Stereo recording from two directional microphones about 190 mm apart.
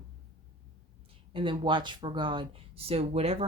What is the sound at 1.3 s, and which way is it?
Speech, 25° right (ahead or behind).